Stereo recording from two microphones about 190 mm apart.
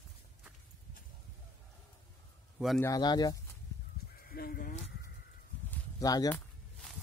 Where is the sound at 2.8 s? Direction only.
20° left (ahead or behind).